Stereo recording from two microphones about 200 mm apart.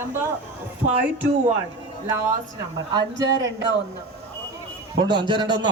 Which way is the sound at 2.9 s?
15° right (ahead or behind).